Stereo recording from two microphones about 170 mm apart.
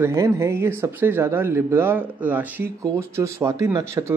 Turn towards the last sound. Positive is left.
turn(degrees=-15)  # may be behind; listen again after turning